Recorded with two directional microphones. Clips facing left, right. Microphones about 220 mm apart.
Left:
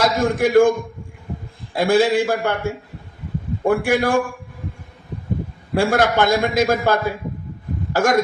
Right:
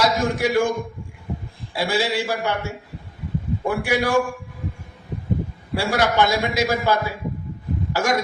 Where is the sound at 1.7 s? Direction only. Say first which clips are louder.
Left 7 dB; 50° left (ahead or behind).